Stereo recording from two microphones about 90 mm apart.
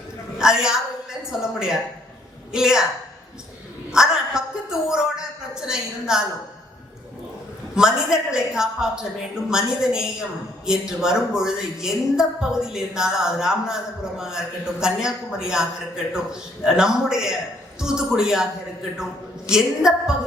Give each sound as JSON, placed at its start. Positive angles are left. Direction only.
{"t": 0.3, "sound": "a woman's voice", "side_deg": -5}
{"t": 3.9, "sound": "a woman's voice", "side_deg": -5}
{"t": 7.8, "sound": "a woman's voice", "side_deg": -5}
{"t": 19.5, "sound": "a woman's voice", "side_deg": -5}